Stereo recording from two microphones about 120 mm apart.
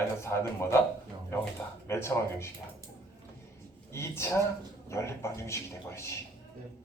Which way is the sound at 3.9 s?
20° left (ahead or behind).